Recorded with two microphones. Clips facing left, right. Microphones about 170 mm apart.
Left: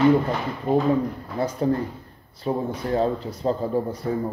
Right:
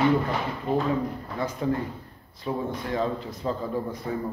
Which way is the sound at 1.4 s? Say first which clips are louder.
Left 4 dB; 35° left (ahead or behind).